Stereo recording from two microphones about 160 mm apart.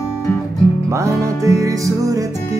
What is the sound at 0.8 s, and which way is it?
Music, 20° right (ahead or behind).